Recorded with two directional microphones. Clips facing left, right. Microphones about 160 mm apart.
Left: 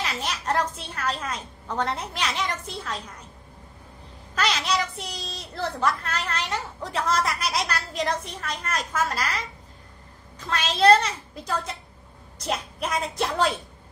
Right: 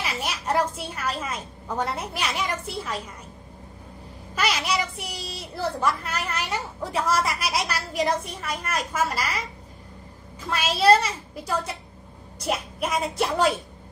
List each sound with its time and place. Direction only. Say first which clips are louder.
0.0 s a sound: even; 10° right (ahead or behind)
0.8 s a woman's voice: even; 10° right (ahead or behind)
4.4 s a woman's voice: even; 10° right (ahead or behind)
10.5 s a woman's voice: even; 5° right (ahead or behind)